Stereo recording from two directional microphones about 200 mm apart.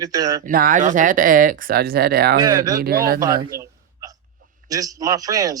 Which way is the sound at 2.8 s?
50° right (ahead or behind).